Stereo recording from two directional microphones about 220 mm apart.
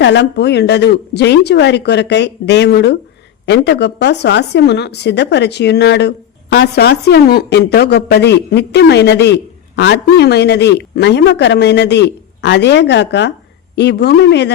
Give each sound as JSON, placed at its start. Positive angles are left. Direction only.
{"t": 0.0, "sound": "a woman's voice", "side_deg": 50}